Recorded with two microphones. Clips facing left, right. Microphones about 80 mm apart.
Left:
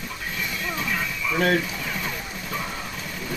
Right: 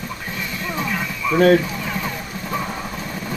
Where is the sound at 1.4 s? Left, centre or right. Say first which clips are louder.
Right 8 dB; right.